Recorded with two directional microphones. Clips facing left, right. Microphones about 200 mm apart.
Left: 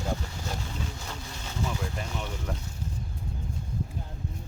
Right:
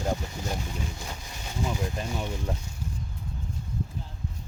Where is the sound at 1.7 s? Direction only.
20° right (ahead or behind).